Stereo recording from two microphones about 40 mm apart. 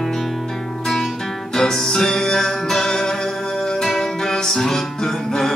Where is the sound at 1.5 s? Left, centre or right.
Centre.